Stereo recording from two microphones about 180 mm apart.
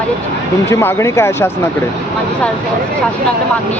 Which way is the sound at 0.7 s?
15° left (ahead or behind).